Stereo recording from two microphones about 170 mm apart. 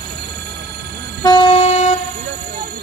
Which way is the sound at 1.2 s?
30° left (ahead or behind).